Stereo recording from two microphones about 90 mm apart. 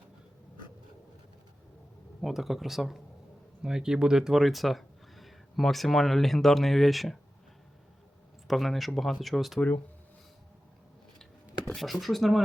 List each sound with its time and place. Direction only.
2.2 s speech: centre (ahead or behind)
8.4 s speech: centre (ahead or behind)
9.6 s speech: 20° left (ahead or behind)
11.7 s speech: centre (ahead or behind)